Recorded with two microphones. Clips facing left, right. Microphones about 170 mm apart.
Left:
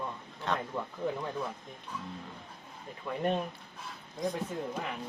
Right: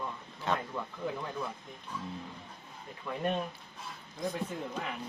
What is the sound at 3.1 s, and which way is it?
Speech, 20° left (ahead or behind).